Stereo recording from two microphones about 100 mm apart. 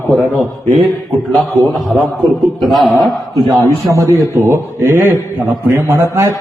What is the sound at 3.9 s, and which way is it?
A man's voice, 30° right (ahead or behind).